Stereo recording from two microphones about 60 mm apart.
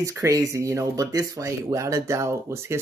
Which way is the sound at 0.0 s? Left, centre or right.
Right.